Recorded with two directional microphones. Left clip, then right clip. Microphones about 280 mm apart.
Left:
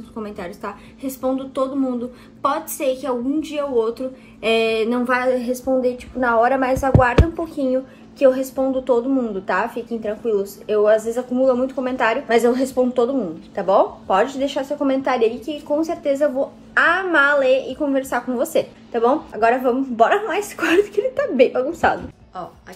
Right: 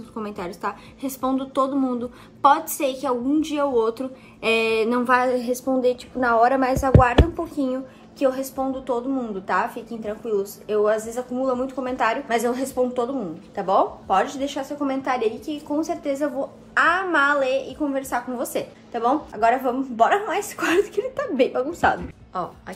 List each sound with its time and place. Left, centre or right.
0.2 s a woman's voice: centre
5.8 s a woman's voice: right
6.2 s a woman's voice: centre
22.3 s speech: centre